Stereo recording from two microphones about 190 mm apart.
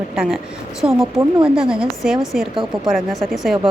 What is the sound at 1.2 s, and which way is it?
Speech, 30° right (ahead or behind).